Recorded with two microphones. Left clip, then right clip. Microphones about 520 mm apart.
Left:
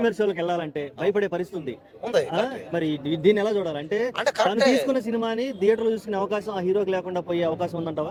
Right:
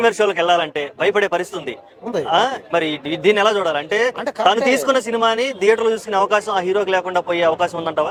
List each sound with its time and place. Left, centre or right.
0.0 s a man's voice: right
4.2 s speech: left
4.4 s a man's voice: right